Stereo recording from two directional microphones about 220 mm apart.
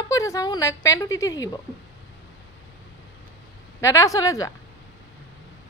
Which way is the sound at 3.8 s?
15° left (ahead or behind).